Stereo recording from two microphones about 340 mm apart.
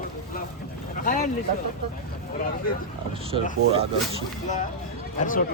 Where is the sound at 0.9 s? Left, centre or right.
Left.